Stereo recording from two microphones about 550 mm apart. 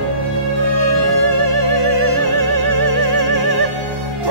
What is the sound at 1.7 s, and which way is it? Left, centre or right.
Music, right.